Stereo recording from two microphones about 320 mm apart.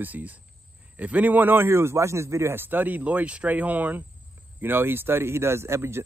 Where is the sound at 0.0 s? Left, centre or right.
Centre.